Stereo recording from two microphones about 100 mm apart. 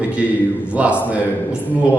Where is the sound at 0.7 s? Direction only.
15° right (ahead or behind).